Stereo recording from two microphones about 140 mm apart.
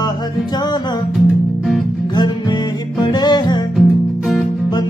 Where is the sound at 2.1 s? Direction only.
30° left (ahead or behind).